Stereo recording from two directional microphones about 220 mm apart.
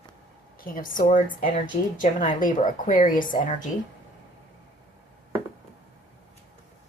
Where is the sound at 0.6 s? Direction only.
40° left (ahead or behind).